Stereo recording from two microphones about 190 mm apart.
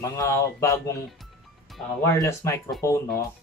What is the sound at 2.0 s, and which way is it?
Speech, 15° left (ahead or behind).